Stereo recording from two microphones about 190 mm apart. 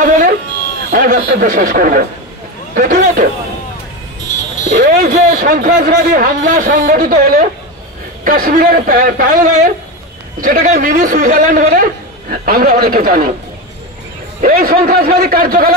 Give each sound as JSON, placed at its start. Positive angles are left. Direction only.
{"t": 0.0, "sound": "a sound", "side_deg": -45}
{"t": 0.9, "sound": "speech", "side_deg": -45}
{"t": 4.6, "sound": "speech", "side_deg": -45}
{"t": 14.4, "sound": "speech", "side_deg": -50}